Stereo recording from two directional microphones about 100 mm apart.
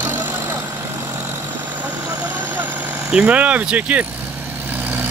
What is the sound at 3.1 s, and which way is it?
Speech, 10° right (ahead or behind).